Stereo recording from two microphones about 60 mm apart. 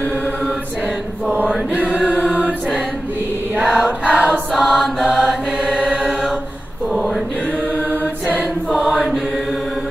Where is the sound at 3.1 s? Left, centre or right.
Right.